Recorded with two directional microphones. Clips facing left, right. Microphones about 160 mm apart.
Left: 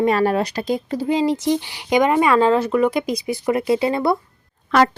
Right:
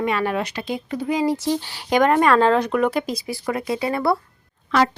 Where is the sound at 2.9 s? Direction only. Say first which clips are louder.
Left 3 dB; 15° left (ahead or behind).